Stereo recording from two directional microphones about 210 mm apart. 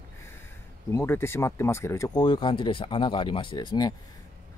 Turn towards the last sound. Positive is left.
turn(degrees=20)  # may be behind; listen again after turning